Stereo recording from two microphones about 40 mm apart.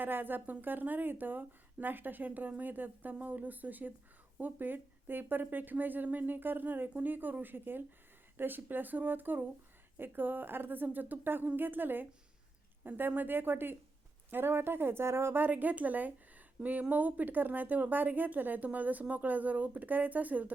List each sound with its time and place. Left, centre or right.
0.0 s a woman's voice: right
15.4 s speech: right